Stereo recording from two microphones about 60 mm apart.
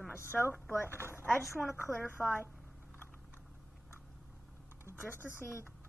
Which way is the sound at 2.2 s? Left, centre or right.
Left.